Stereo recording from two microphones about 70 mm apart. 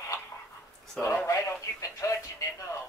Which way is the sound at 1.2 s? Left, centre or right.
Left.